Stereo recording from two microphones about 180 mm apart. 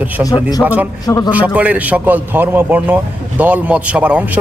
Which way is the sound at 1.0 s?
20° left (ahead or behind).